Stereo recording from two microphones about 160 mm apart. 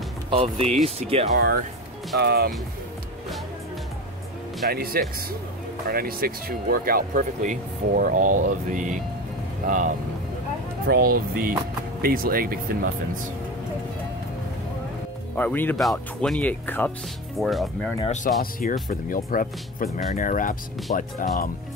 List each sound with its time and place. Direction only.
0.3 s speech: 35° right (ahead or behind)
1.3 s speech: 70° right (ahead or behind)
2.1 s speech: 85° right
4.6 s speech: 70° right (ahead or behind)
10.9 s speech: 65° right (ahead or behind)
15.3 s speech: 10° left (ahead or behind)
17.4 s speech: centre (ahead or behind)
18.0 s speech: 50° left (ahead or behind)
18.4 s speech: 60° left (ahead or behind)